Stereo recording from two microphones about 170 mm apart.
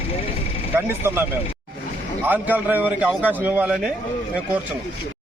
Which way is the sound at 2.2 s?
10° right (ahead or behind).